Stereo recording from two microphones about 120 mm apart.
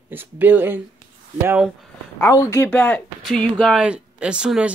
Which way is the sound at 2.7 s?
10° left (ahead or behind).